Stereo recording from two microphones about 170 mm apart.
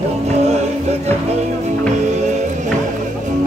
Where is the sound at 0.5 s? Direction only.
40° right (ahead or behind).